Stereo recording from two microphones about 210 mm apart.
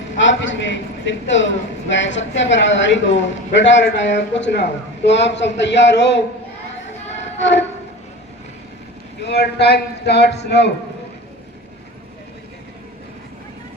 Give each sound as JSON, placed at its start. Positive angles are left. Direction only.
{"t": 0.2, "sound": "a man's voice", "side_deg": 60}
{"t": 7.3, "sound": "a sound", "side_deg": 60}
{"t": 9.2, "sound": "a man's voice", "side_deg": 50}